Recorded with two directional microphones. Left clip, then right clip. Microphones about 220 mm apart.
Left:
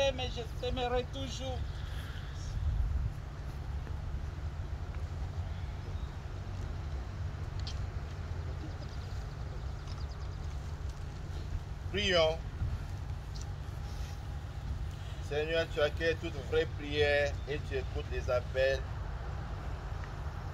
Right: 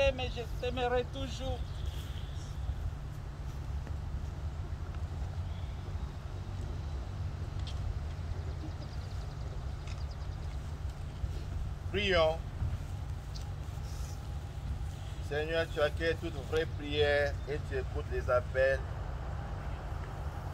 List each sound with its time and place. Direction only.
0.0 s speech: centre (ahead or behind)
11.9 s speech: 15° left (ahead or behind)
15.2 s speech: 15° left (ahead or behind)